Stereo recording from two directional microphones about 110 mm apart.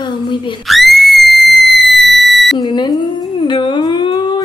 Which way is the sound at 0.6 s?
Centre (ahead or behind).